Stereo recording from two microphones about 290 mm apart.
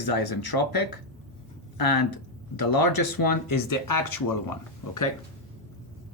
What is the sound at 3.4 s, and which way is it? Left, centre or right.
Speech, left.